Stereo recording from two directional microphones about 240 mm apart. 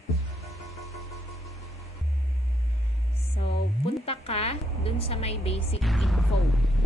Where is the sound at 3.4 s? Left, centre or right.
Left.